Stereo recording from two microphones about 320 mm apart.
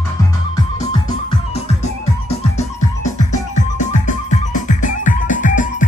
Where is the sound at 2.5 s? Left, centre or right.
Left.